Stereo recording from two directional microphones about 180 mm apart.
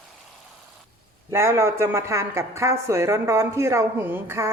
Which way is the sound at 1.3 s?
15° right (ahead or behind).